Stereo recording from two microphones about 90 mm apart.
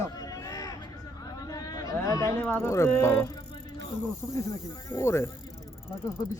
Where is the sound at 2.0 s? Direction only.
40° left (ahead or behind).